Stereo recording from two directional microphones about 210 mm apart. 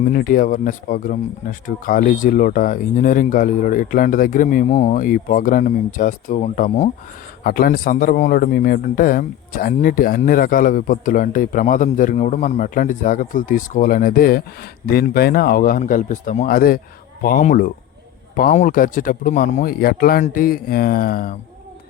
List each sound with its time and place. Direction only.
0.1 s a man's voice: 45° left (ahead or behind)